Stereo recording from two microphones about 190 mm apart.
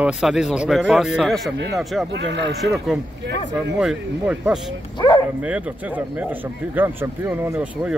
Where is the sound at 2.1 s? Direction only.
65° right (ahead or behind).